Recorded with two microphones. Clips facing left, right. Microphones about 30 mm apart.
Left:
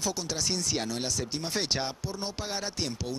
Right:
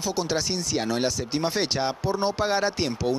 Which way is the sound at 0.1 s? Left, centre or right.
Right.